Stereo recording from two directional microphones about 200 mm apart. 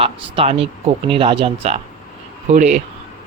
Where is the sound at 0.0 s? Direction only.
30° right (ahead or behind).